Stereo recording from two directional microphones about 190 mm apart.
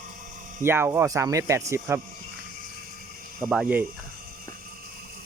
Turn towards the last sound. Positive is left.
turn(degrees=-10)  # may be behind; listen again after turning